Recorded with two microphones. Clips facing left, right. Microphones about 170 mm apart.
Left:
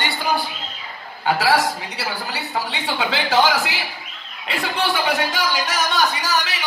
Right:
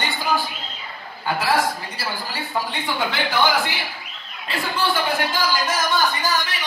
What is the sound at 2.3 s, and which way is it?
A woman's voice, 85° left.